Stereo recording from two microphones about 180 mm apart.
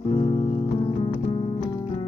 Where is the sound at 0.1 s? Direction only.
35° left (ahead or behind).